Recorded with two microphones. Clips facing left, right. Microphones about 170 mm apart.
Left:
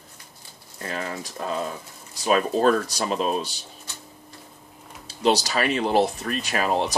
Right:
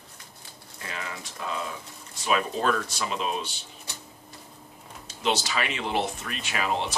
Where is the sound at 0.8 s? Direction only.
45° left (ahead or behind).